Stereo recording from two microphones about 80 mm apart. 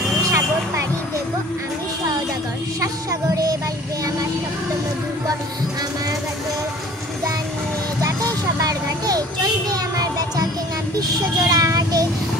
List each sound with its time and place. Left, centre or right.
0.2 s vehicle: right
2.8 s a sound: right
8.0 s child singing: right